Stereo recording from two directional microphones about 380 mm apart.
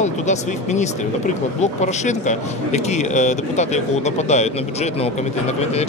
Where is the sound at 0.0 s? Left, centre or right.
Centre.